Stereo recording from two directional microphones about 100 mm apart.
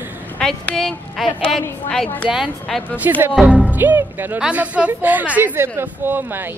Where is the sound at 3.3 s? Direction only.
5° right (ahead or behind).